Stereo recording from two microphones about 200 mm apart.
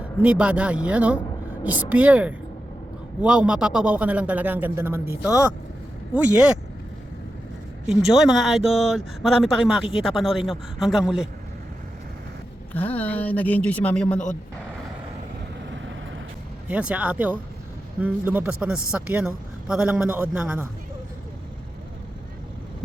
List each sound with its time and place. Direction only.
0.2 s a man's voice: 5° right (ahead or behind)
7.9 s speech: centre (ahead or behind)
12.7 s speech: 10° left (ahead or behind)
15.7 s vehicle: 70° right (ahead or behind)
16.6 s a man's voice: 5° right (ahead or behind)